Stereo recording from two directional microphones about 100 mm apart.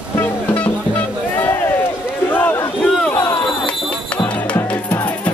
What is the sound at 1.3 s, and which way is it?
Run, 20° left (ahead or behind).